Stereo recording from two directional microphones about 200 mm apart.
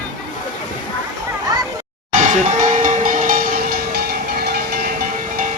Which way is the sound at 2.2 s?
40° right (ahead or behind).